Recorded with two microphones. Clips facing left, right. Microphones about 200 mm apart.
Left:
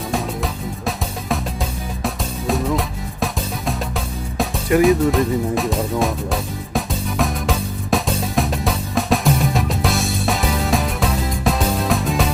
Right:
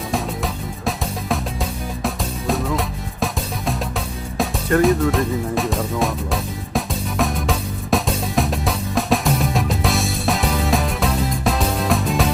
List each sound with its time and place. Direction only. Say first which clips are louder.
0.1 s music: even; centre (ahead or behind)
4.8 s music: left 2 dB; centre (ahead or behind)